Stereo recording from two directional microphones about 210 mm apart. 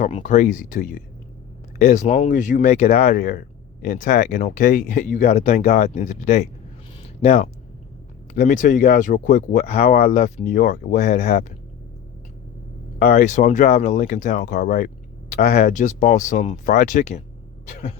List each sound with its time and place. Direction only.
0.0 s speech: 35° left (ahead or behind)
13.0 s speech: 40° left (ahead or behind)
17.7 s a sound: 35° left (ahead or behind)